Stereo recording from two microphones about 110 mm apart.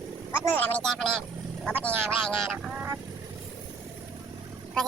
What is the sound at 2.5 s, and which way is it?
Vehicle, 15° right (ahead or behind).